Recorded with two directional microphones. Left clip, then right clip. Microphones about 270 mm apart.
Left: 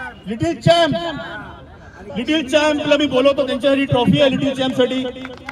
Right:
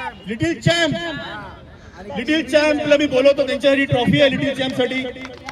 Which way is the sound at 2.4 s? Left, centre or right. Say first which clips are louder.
Even; centre.